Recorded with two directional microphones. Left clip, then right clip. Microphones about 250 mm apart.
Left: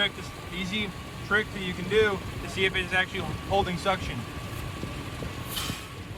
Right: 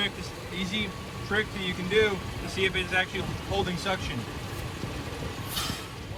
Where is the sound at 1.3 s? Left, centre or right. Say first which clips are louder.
Left 2 dB; centre.